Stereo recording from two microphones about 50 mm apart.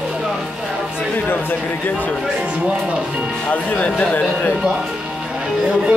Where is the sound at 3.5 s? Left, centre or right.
Left.